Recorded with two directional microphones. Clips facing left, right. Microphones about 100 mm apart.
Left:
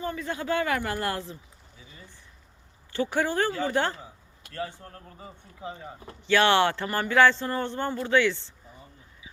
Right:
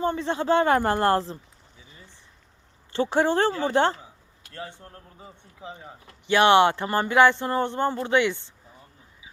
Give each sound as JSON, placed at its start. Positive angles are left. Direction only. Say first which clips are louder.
{"t": 0.0, "sound": "speech", "louder": "right 6 dB", "side_deg": -30}
{"t": 2.9, "sound": "speech", "louder": "right 4 dB", "side_deg": -25}
{"t": 6.2, "sound": "speech", "louder": "right 4 dB", "side_deg": -20}